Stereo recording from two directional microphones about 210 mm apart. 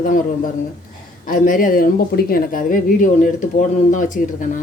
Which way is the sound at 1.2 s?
40° left (ahead or behind).